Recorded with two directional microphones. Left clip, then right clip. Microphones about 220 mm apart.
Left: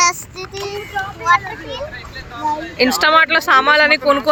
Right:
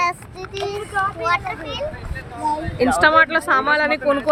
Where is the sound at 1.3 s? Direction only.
10° right (ahead or behind).